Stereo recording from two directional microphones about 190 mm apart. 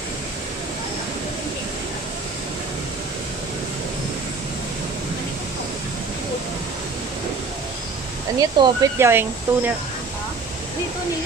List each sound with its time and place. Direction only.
8.4 s speech: 20° right (ahead or behind)